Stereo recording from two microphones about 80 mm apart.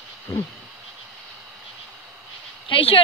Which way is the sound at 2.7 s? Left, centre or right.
Left.